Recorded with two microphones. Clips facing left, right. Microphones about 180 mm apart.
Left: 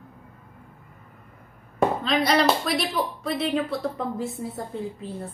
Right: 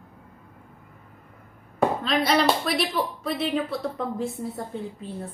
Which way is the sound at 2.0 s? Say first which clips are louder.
Left 1 dB; centre (ahead or behind).